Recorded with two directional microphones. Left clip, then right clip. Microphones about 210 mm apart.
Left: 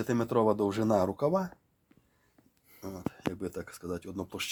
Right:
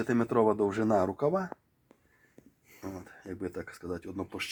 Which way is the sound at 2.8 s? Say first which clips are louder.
Left 6 dB; 35° left (ahead or behind).